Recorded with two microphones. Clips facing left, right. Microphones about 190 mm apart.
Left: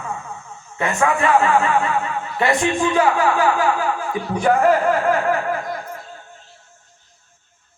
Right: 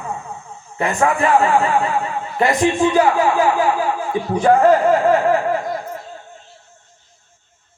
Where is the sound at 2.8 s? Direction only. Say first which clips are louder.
Right 3 dB; 25° right (ahead or behind).